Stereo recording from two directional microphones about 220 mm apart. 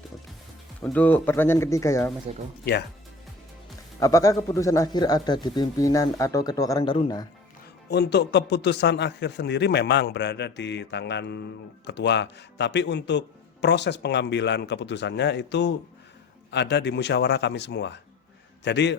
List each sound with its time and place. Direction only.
0.8 s speech: 5° left (ahead or behind)
4.0 s speech: 15° left (ahead or behind)
7.9 s speech: 50° left (ahead or behind)